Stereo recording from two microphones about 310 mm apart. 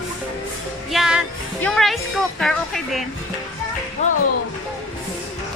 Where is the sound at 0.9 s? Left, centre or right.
Centre.